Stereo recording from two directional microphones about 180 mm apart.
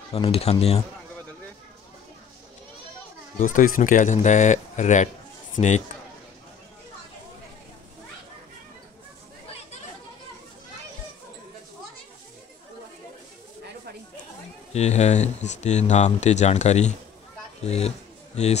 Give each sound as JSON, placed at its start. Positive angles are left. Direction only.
{"t": 0.1, "sound": "speech", "side_deg": 35}
{"t": 3.3, "sound": "speech", "side_deg": 45}
{"t": 14.7, "sound": "speech", "side_deg": 40}